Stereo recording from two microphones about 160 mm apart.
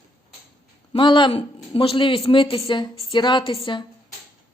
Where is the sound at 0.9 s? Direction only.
30° left (ahead or behind).